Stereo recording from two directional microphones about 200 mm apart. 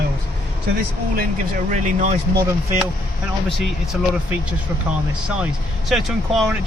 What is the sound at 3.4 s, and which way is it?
Speech, centre (ahead or behind).